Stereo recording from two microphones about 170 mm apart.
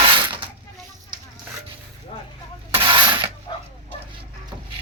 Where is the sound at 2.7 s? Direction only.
30° right (ahead or behind).